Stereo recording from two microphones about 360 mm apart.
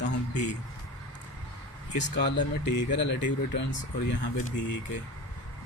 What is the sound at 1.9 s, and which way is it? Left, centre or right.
Speech, left.